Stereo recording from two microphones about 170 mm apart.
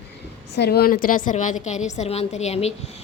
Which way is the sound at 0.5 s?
75° left (ahead or behind).